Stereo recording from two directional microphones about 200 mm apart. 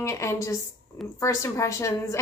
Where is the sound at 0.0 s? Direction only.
15° left (ahead or behind).